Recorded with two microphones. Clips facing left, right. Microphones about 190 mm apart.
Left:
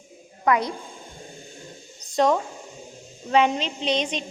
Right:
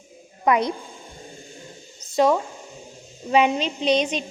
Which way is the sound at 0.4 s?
20° right (ahead or behind).